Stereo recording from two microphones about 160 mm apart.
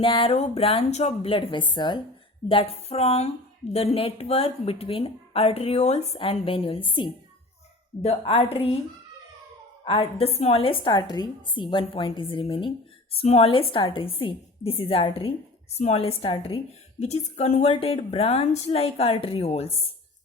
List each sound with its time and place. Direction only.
0.0 s a woman's voice: 35° left (ahead or behind)
9.8 s a woman's voice: 35° left (ahead or behind)